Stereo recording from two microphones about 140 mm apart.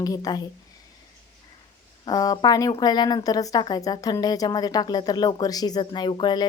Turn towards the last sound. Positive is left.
turn(degrees=35)  # may be behind; listen again after turning